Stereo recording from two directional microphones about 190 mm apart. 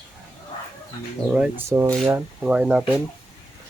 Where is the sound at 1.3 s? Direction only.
10° right (ahead or behind).